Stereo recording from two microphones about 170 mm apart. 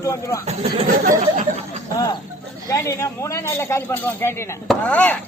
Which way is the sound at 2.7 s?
20° left (ahead or behind).